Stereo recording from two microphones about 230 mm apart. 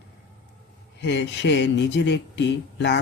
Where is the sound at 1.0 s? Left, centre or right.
Left.